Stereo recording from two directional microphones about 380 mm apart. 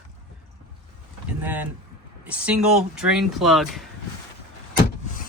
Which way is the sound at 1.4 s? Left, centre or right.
Centre.